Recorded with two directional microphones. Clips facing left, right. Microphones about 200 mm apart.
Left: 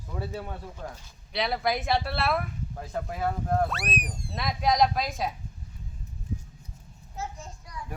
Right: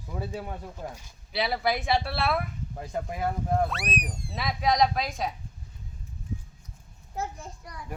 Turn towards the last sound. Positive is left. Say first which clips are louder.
# right 2 dB
turn(degrees=-60)  # may be behind; listen again after turning